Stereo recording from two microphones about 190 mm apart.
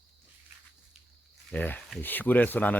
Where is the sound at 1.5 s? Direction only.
10° left (ahead or behind).